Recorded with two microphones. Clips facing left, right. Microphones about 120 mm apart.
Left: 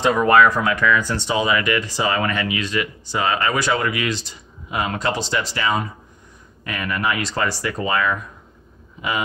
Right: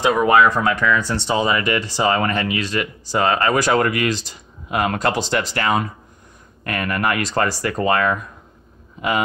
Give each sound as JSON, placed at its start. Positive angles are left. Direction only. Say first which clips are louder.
{"t": 0.0, "sound": "speech", "louder": "right 1 dB", "side_deg": -10}
{"t": 0.4, "sound": "speech", "louder": "even", "side_deg": -25}